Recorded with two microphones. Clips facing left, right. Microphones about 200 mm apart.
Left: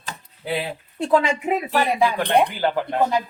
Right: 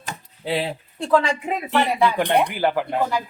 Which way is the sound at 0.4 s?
30° right (ahead or behind).